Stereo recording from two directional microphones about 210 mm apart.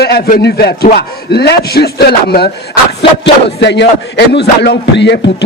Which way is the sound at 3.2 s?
55° left (ahead or behind).